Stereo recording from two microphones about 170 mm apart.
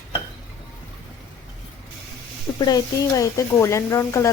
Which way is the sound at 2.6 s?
20° left (ahead or behind).